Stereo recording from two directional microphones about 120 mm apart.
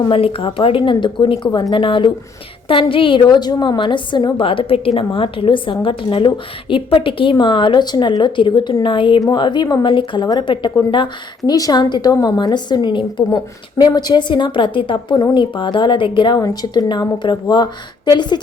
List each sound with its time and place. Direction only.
0.1 s a woman's voice: 50° left (ahead or behind)
4.4 s a woman's voice: 45° left (ahead or behind)
16.4 s a woman's voice: 30° left (ahead or behind)